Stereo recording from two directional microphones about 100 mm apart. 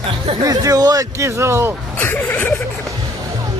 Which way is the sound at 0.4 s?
35° right (ahead or behind).